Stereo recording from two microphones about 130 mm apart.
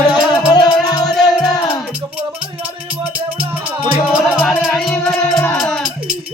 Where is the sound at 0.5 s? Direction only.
30° left (ahead or behind).